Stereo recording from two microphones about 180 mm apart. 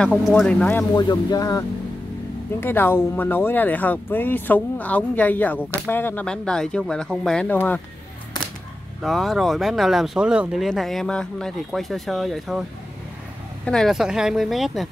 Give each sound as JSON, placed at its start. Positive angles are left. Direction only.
{"t": 0.0, "sound": "speech", "side_deg": 0}
{"t": 0.9, "sound": "speech", "side_deg": 20}
{"t": 2.6, "sound": "speech", "side_deg": 10}
{"t": 9.0, "sound": "speech", "side_deg": 0}
{"t": 13.7, "sound": "speech", "side_deg": 0}